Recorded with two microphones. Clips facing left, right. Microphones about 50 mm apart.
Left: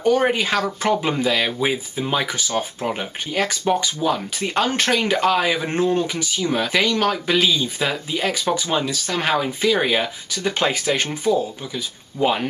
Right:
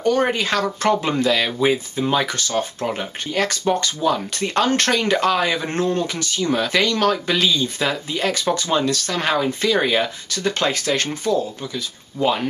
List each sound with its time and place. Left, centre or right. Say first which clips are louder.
0.0 s speech: left 1 dB; centre